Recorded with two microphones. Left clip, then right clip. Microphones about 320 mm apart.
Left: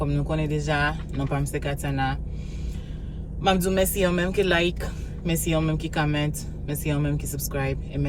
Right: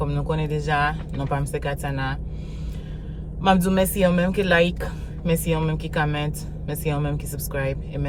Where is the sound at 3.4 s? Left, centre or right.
Centre.